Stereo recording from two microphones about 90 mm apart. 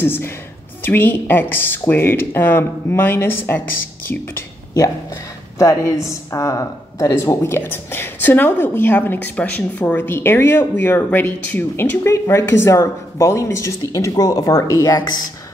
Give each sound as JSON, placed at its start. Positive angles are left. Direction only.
{"t": 0.0, "sound": "speech", "side_deg": 25}
{"t": 4.7, "sound": "speech", "side_deg": 35}